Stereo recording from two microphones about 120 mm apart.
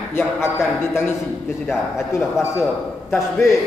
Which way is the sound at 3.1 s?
20° left (ahead or behind).